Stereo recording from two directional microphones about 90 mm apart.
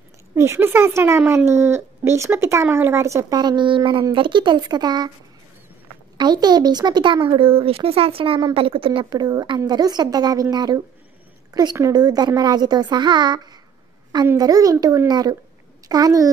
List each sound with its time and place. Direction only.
0.3 s speech: 30° right (ahead or behind)
3.3 s a woman's voice: 55° right (ahead or behind)
6.1 s a woman's voice: 50° right (ahead or behind)
7.2 s speech: 85° right
9.1 s a woman's voice: 50° right (ahead or behind)
14.3 s a woman's voice: 40° right (ahead or behind)